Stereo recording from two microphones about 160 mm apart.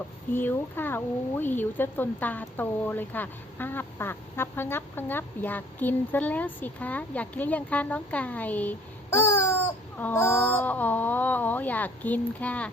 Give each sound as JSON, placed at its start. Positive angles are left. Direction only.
{"t": 0.3, "sound": "speech", "side_deg": 15}